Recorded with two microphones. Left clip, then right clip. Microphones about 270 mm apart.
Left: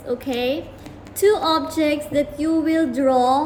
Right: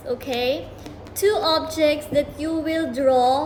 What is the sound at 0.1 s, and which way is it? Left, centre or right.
A woman's voice, centre.